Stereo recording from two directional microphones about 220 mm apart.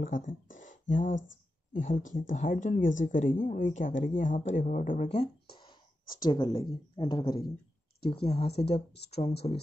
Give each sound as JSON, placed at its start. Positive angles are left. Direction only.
{"t": 0.0, "sound": "speech", "side_deg": 35}
{"t": 0.6, "sound": "a sound", "side_deg": 35}
{"t": 1.7, "sound": "speech", "side_deg": 35}
{"t": 5.6, "sound": "speech", "side_deg": 20}